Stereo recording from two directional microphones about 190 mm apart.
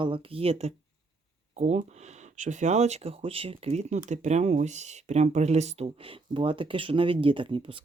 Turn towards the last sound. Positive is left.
turn(degrees=-25)  # may be behind; listen again after turning